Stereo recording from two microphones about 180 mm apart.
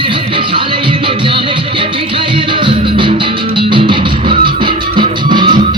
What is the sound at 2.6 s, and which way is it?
Music, 30° right (ahead or behind).